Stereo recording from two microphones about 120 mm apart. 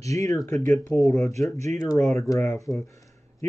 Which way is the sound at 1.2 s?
25° left (ahead or behind).